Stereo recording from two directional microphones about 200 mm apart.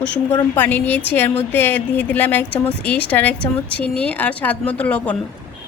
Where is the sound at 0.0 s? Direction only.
10° left (ahead or behind).